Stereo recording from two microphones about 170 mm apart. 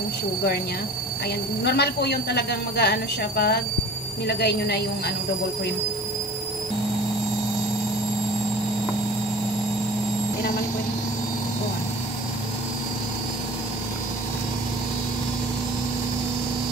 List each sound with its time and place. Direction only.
1.6 s a woman's voice: 75° left (ahead or behind)